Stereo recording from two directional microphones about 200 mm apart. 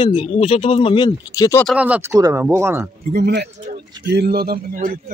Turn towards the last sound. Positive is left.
turn(degrees=-45)  # may be behind; listen again after turning